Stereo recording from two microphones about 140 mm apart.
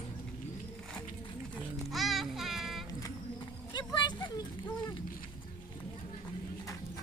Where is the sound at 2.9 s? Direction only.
30° left (ahead or behind).